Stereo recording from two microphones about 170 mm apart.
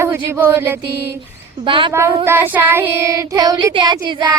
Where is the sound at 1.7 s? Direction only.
30° right (ahead or behind).